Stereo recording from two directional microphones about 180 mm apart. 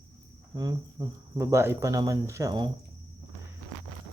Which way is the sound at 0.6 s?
20° right (ahead or behind).